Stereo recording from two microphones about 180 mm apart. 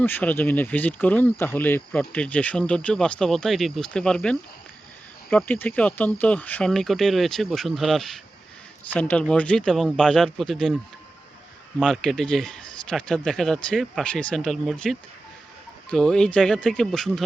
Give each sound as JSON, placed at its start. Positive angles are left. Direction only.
{"t": 0.0, "sound": "a man's voice", "side_deg": 10}
{"t": 11.8, "sound": "a man's voice", "side_deg": 0}